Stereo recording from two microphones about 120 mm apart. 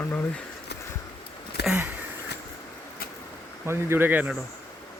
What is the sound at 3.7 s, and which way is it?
Speech, 20° right (ahead or behind).